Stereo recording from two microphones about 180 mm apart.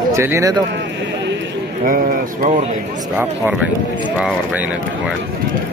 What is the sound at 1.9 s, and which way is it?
Speech, 50° right (ahead or behind).